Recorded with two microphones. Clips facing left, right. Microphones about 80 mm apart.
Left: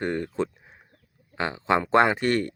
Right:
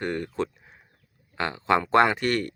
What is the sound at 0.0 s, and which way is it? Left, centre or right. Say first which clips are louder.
Speech: left 1 dB; left.